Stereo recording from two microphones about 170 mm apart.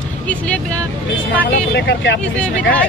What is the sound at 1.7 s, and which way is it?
Speech, 90° left.